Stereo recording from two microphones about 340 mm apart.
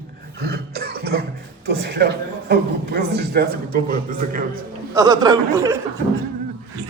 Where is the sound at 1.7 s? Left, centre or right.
Right.